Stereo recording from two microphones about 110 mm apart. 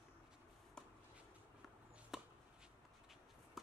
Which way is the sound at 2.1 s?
5° right (ahead or behind).